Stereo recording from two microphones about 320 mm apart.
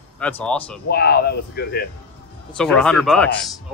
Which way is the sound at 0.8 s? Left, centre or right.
Left.